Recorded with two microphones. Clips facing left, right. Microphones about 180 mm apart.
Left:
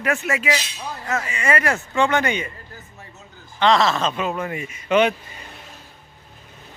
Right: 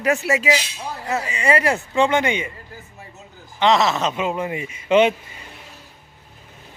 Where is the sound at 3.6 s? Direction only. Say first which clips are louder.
Even; 20° right (ahead or behind).